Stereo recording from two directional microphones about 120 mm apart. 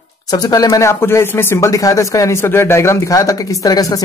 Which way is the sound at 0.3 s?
35° left (ahead or behind).